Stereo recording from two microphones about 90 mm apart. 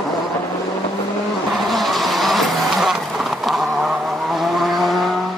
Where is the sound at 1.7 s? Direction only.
Centre (ahead or behind).